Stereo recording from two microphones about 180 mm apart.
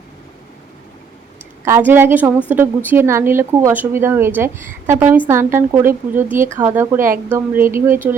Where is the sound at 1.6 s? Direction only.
15° right (ahead or behind).